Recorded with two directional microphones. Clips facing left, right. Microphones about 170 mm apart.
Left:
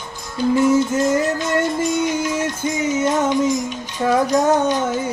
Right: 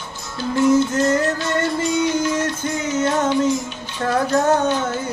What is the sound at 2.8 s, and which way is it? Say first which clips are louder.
Music: left 1 dB; 10° left (ahead or behind).